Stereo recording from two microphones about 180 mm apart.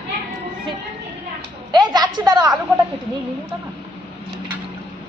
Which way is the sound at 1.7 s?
25° right (ahead or behind).